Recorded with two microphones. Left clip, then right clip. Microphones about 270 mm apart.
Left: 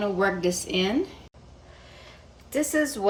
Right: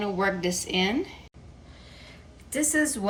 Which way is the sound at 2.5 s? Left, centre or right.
Left.